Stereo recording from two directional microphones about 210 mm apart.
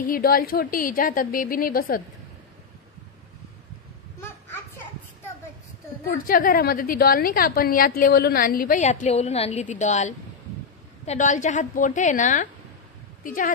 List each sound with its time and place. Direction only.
0.0 s a woman's voice: 45° left (ahead or behind)
6.0 s a woman's voice: 45° left (ahead or behind)